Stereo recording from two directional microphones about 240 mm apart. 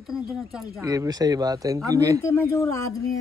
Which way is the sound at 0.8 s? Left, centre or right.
Centre.